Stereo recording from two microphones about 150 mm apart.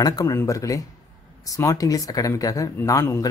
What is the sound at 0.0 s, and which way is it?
Speech, 25° left (ahead or behind).